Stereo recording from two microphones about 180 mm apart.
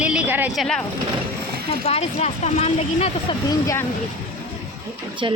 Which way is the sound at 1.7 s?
35° left (ahead or behind).